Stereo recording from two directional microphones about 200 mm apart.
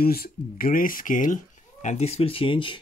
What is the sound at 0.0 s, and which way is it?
Speech, 50° left (ahead or behind).